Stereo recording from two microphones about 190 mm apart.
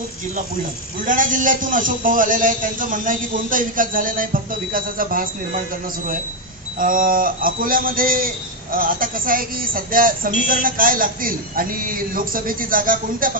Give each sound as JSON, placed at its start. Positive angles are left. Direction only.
{"t": 1.0, "sound": "speech", "side_deg": -45}
{"t": 6.8, "sound": "speech", "side_deg": -45}